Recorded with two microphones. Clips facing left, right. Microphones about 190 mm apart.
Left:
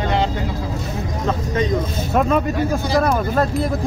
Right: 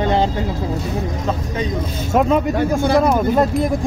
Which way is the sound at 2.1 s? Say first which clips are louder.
Right 2 dB; 15° right (ahead or behind).